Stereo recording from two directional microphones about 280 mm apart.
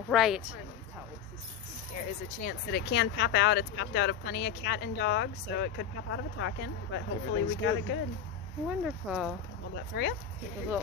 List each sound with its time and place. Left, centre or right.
0.1 s speech: centre
2.4 s speech: left
8.6 s speech: centre
9.9 s speech: left